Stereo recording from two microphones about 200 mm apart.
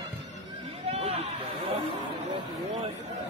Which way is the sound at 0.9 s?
30° right (ahead or behind).